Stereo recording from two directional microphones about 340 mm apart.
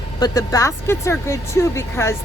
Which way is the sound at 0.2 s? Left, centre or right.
Centre.